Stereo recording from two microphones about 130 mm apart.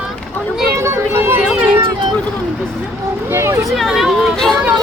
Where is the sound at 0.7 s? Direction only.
20° right (ahead or behind).